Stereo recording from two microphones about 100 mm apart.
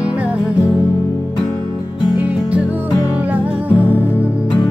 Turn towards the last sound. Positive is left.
turn(degrees=-15)  # may be behind; listen again after turning